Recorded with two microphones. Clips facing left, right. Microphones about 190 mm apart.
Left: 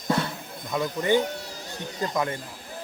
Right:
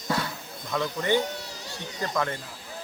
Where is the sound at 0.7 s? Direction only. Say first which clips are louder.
Left 2 dB; 15° left (ahead or behind).